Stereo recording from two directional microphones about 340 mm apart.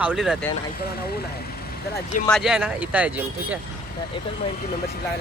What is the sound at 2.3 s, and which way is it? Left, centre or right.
Speech, centre.